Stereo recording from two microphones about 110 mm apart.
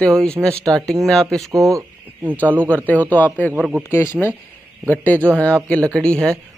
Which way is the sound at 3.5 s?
10° right (ahead or behind).